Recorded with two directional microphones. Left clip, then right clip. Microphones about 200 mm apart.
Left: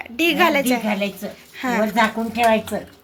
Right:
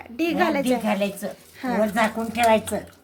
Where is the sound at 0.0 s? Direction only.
Centre (ahead or behind).